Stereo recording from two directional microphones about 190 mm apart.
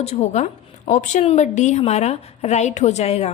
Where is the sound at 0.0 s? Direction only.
35° left (ahead or behind).